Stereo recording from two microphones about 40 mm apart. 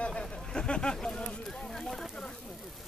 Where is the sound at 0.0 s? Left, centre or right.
Left.